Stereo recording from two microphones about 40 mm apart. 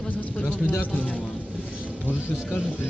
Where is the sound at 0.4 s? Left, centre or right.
Left.